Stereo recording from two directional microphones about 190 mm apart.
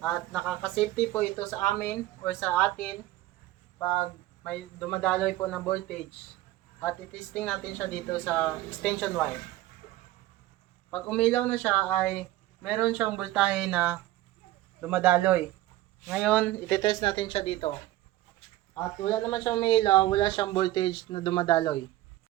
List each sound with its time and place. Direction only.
0.0 s speech: centre (ahead or behind)
10.9 s speech: 5° left (ahead or behind); by 15.4 s 10° right (ahead or behind)
16.0 s speech: centre (ahead or behind); by 17.7 s 35° left (ahead or behind)
18.9 s speech: 20° left (ahead or behind)